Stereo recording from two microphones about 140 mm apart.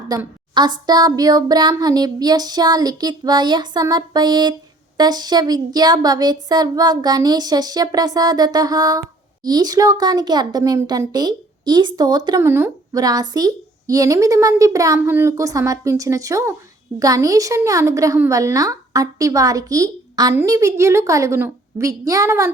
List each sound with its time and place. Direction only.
0.1 s a woman's voice: 25° right (ahead or behind)
12.4 s a woman's voice: 15° right (ahead or behind)